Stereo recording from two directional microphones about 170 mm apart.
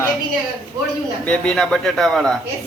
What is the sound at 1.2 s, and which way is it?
A man's voice, 5° left (ahead or behind).